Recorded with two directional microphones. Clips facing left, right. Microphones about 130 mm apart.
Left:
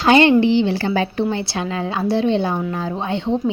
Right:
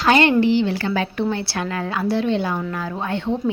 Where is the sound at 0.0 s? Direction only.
25° left (ahead or behind).